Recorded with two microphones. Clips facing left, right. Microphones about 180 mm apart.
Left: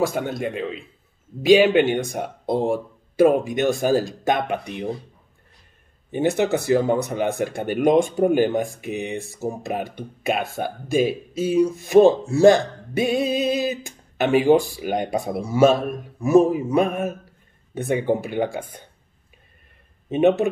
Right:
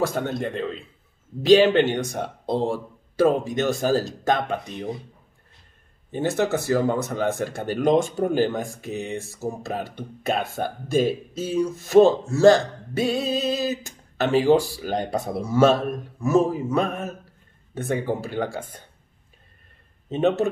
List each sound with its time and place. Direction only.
0.0 s speech: 10° left (ahead or behind)
6.1 s speech: 15° left (ahead or behind)
20.1 s speech: 15° left (ahead or behind)